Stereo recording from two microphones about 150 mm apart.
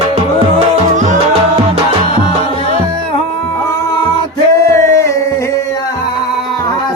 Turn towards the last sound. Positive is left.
turn(degrees=20)  # may be behind; listen again after turning